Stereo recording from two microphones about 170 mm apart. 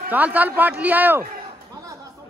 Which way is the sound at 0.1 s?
10° right (ahead or behind).